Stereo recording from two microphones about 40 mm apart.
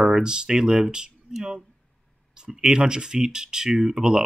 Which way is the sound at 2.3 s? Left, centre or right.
Centre.